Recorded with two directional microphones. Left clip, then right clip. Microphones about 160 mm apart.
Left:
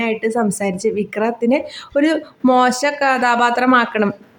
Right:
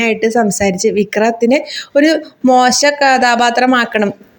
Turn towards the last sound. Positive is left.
turn(degrees=-10)  # may be behind; listen again after turning